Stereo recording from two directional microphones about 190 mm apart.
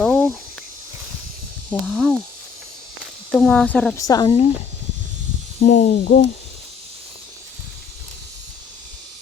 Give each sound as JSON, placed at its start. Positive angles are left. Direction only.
{"t": 0.0, "sound": "cricket", "side_deg": 5}
{"t": 1.9, "sound": "speech", "side_deg": -5}
{"t": 3.9, "sound": "speech", "side_deg": 20}
{"t": 5.6, "sound": "speech", "side_deg": 45}